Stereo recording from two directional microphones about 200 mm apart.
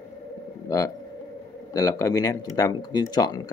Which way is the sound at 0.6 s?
15° left (ahead or behind).